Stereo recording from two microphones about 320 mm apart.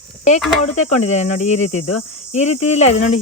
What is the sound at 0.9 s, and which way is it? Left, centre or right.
Speech, left.